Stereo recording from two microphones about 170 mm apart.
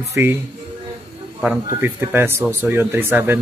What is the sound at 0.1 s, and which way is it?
Speech, 15° right (ahead or behind).